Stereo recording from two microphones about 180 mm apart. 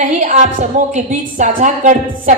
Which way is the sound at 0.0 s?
45° right (ahead or behind).